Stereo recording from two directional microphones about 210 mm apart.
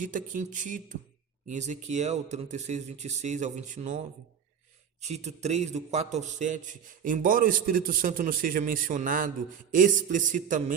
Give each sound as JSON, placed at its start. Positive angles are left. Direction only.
{"t": 0.0, "sound": "a man's voice", "side_deg": -40}
{"t": 5.0, "sound": "a man's voice", "side_deg": -30}